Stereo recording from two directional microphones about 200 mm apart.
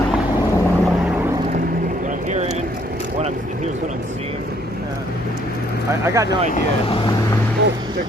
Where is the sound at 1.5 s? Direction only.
40° right (ahead or behind).